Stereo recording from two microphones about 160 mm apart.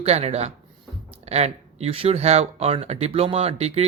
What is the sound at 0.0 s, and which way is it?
Speech, 40° right (ahead or behind).